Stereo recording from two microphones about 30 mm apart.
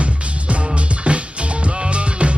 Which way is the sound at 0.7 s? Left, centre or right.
Right.